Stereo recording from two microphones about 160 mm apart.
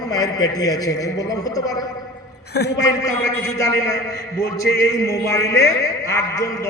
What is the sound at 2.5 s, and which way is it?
Speech, 90° left.